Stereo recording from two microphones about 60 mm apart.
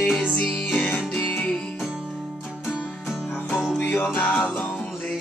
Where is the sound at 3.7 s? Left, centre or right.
Left.